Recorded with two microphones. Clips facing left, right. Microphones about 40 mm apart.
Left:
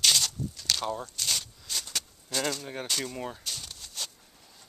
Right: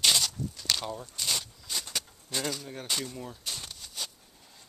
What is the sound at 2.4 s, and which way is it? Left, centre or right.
Speech, centre.